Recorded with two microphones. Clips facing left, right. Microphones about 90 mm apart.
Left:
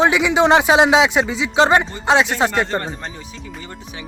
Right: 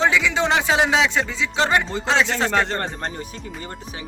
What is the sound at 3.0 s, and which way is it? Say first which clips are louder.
Speech: right 3 dB; 45° right (ahead or behind).